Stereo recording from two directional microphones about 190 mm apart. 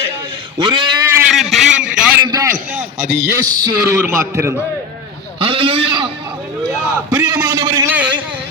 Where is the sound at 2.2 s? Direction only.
20° right (ahead or behind).